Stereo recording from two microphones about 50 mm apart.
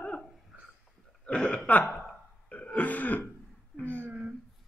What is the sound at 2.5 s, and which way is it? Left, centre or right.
Throat clearing, left.